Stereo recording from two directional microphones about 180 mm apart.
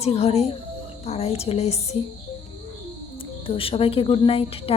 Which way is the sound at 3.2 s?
30° left (ahead or behind).